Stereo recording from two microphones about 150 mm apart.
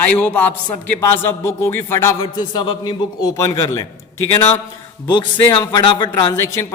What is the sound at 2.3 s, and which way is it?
Speech, 30° left (ahead or behind).